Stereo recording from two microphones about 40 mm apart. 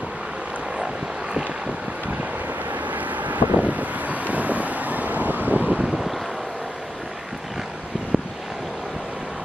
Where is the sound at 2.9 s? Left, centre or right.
Right.